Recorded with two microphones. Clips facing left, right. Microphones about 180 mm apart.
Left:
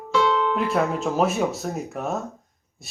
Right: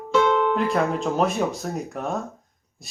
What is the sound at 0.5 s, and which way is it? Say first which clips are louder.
Speech: right 1 dB; centre (ahead or behind).